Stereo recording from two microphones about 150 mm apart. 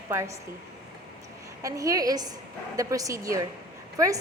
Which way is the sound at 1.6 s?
20° right (ahead or behind).